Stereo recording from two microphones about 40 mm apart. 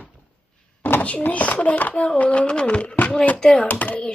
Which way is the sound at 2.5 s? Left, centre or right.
Left.